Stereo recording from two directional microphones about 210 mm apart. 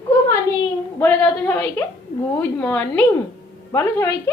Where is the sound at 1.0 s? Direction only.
10° left (ahead or behind).